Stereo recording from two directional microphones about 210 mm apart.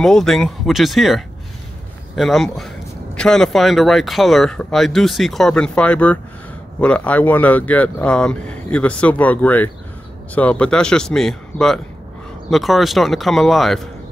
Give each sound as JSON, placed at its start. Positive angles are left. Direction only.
{"t": 0.0, "sound": "speech", "side_deg": 0}